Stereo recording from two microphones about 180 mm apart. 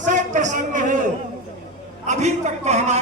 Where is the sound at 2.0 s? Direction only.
40° right (ahead or behind).